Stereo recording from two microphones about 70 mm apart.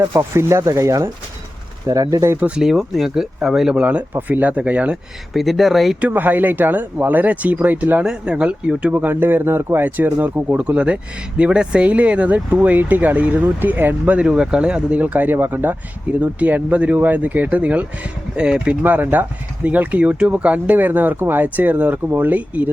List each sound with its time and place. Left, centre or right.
0.0 s speech: right
1.9 s speech: right
2.6 s speech: centre
5.3 s speech: centre
6.0 s speech: right
8.0 s speech: centre